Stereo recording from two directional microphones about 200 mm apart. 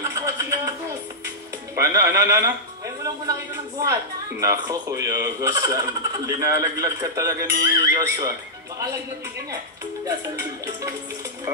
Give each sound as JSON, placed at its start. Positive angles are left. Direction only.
{"t": 0.0, "sound": "a sound", "side_deg": -15}
{"t": 1.8, "sound": "speech", "side_deg": -15}
{"t": 3.8, "sound": "speech", "side_deg": -15}